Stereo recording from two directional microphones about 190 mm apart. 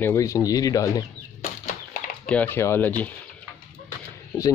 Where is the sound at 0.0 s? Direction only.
15° left (ahead or behind).